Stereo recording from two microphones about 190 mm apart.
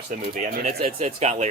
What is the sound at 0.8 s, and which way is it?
Speech, 35° right (ahead or behind).